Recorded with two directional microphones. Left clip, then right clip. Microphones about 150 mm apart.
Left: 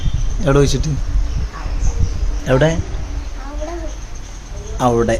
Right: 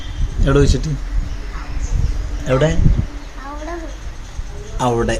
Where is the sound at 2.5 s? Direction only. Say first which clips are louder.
Left 2 dB; 30° left (ahead or behind).